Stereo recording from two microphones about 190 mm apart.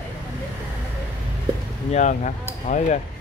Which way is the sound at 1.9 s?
40° left (ahead or behind).